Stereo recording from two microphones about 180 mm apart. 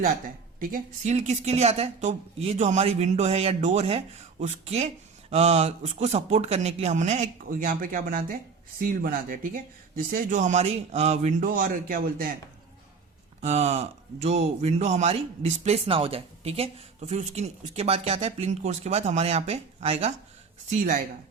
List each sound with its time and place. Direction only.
0.6 s speech: 45° right (ahead or behind)
13.4 s speech: 40° right (ahead or behind)
20.7 s speech: 45° right (ahead or behind)